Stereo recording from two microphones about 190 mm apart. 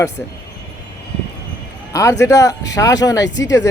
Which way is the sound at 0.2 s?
10° left (ahead or behind).